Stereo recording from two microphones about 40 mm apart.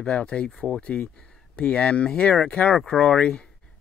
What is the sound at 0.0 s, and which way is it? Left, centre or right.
Speech, left.